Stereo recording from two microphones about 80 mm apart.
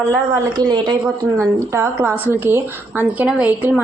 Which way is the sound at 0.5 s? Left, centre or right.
Right.